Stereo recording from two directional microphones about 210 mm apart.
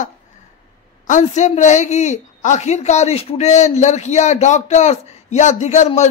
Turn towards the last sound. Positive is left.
turn(degrees=35)  # may be behind; listen again after turning